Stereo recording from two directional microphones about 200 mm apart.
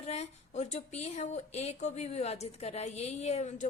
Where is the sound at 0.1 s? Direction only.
35° left (ahead or behind).